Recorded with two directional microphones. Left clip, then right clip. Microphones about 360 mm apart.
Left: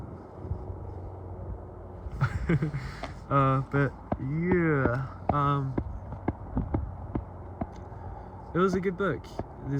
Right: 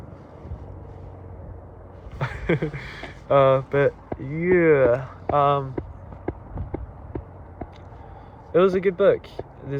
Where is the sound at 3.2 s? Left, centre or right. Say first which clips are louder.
Right 9 dB; centre.